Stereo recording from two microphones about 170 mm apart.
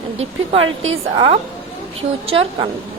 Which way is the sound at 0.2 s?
35° right (ahead or behind).